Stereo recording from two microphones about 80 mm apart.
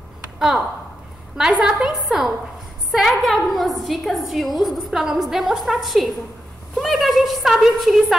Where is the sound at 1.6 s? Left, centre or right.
Centre.